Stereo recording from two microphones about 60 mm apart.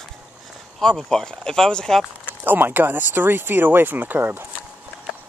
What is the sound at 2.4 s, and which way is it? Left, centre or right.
Speech, right.